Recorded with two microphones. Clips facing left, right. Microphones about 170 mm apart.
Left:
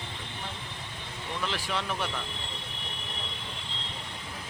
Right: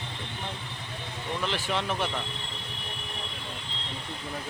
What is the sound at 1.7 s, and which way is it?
Speech, 25° right (ahead or behind).